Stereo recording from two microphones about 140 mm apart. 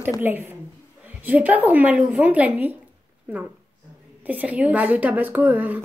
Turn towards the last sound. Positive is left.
turn(degrees=-10)  # may be behind; listen again after turning